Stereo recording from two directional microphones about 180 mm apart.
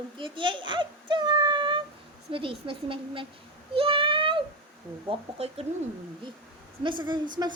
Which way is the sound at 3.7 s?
30° right (ahead or behind).